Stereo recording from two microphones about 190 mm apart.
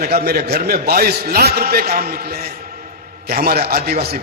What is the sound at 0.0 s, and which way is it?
A man's voice, 55° right (ahead or behind).